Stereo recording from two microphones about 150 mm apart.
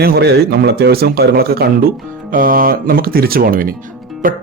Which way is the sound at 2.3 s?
70° right (ahead or behind).